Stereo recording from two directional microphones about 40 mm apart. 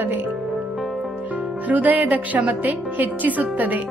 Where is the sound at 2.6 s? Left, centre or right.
Right.